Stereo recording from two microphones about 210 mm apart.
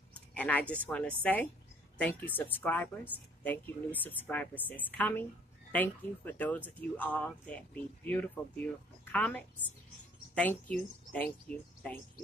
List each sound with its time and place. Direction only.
0.3 s a woman's voice: 5° left (ahead or behind)